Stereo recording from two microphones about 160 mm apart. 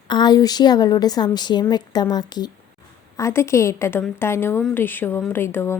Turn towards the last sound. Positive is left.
turn(degrees=15)  # may be behind; listen again after turning